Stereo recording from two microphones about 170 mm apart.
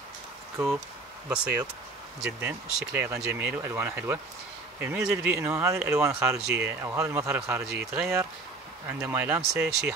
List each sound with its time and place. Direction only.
1.3 s speech: 5° right (ahead or behind)